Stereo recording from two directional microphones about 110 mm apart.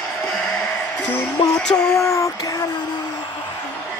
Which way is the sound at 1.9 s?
30° left (ahead or behind).